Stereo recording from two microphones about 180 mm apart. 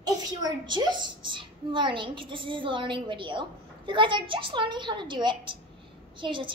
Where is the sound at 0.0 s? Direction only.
20° right (ahead or behind).